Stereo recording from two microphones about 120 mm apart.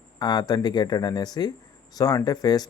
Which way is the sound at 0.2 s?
35° left (ahead or behind).